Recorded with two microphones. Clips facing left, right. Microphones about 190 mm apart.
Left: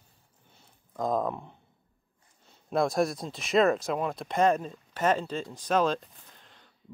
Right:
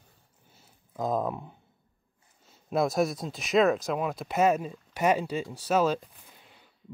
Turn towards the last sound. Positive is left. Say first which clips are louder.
# right 1 dB
turn(degrees=-10)  # may be behind; listen again after turning